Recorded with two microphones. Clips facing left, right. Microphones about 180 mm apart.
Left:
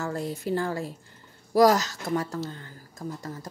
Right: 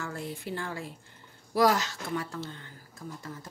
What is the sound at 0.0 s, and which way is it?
Speech, 40° left (ahead or behind).